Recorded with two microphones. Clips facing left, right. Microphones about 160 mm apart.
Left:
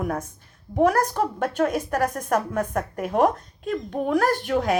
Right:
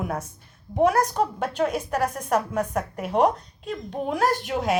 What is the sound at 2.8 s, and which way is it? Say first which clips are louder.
Speech: left 1 dB; 50° left (ahead or behind).